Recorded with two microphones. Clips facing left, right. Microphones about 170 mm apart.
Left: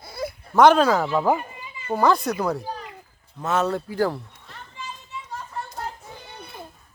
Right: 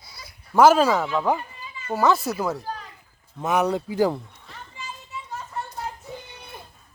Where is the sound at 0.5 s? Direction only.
5° right (ahead or behind).